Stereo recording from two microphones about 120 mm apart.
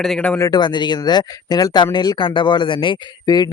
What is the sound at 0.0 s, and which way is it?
Speech, 5° left (ahead or behind).